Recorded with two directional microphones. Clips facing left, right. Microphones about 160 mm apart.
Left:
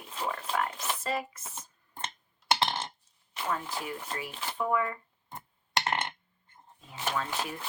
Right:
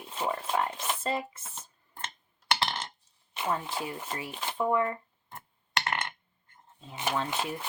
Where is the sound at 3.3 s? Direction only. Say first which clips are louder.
Right 2 dB; 25° right (ahead or behind).